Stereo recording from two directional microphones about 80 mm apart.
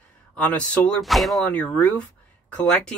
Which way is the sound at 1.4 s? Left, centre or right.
Centre.